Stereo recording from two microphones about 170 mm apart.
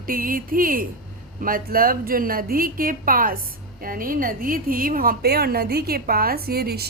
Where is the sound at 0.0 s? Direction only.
55° right (ahead or behind).